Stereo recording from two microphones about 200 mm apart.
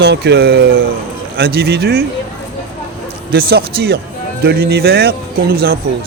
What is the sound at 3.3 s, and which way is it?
Speech, 50° right (ahead or behind).